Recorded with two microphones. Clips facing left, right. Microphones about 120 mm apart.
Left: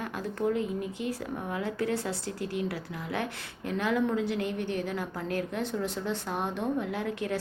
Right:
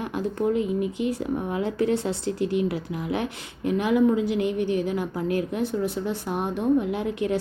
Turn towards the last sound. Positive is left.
turn(degrees=-20)  # may be behind; listen again after turning